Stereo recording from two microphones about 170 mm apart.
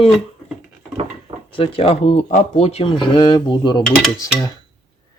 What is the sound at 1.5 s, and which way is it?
Speech, 35° left (ahead or behind).